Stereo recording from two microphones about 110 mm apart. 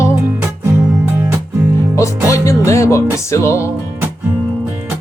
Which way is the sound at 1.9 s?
30° left (ahead or behind).